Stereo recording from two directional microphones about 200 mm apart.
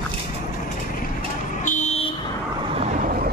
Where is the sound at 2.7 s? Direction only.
35° right (ahead or behind).